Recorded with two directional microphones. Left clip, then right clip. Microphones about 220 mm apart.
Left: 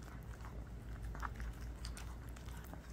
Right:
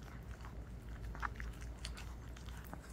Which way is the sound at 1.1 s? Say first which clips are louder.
Right 3 dB; 25° left (ahead or behind).